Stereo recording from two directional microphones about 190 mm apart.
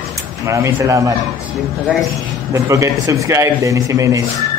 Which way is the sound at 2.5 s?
15° right (ahead or behind).